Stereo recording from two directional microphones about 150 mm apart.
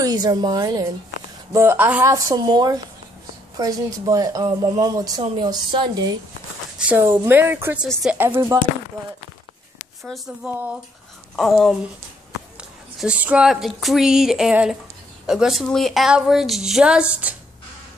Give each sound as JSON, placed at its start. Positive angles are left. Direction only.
{"t": 0.0, "sound": "a woman's voice", "side_deg": -25}
{"t": 7.2, "sound": "speech", "side_deg": -15}
{"t": 7.8, "sound": "a woman's voice", "side_deg": -5}
{"t": 8.5, "sound": "speech", "side_deg": -25}
{"t": 10.0, "sound": "a woman's voice", "side_deg": 0}